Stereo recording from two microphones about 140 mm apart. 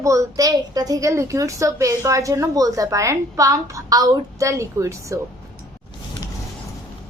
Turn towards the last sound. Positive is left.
turn(degrees=-20)  # may be behind; listen again after turning